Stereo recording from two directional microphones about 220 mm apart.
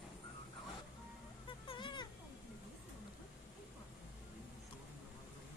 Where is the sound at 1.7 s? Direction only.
20° left (ahead or behind).